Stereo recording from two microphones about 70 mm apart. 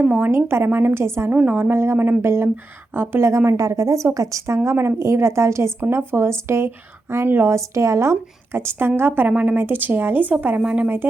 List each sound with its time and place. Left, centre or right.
0.0 s a woman's voice: right
0.3 s a woman's voice: right
1.3 s a woman's voice: right
10.6 s speech: centre